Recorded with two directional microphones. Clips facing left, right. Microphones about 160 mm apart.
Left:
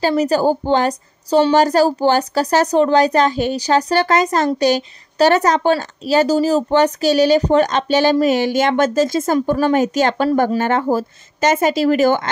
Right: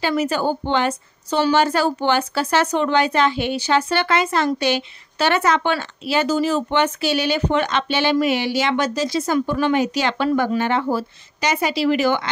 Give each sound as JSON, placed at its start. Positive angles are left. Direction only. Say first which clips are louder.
{"t": 0.0, "sound": "a woman's voice", "louder": "left 5 dB", "side_deg": 40}